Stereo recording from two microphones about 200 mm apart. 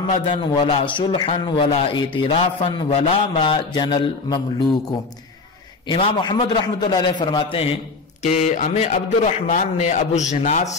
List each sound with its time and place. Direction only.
0.3 s a man's voice: 25° left (ahead or behind)
5.9 s a man's voice: 20° left (ahead or behind)
8.2 s a man's voice: 35° left (ahead or behind)